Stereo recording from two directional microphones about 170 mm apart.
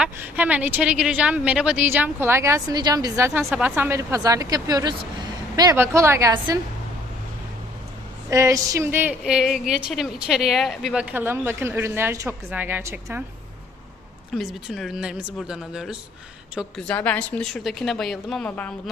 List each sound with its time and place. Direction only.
0.0 s a woman's voice: 10° right (ahead or behind)
8.3 s a woman's voice: 20° right (ahead or behind)
14.3 s a woman's voice: centre (ahead or behind)